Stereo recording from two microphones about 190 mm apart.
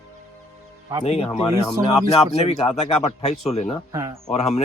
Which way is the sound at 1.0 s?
35° left (ahead or behind).